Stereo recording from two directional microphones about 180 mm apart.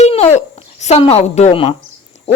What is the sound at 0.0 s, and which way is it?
A woman's voice, 35° left (ahead or behind).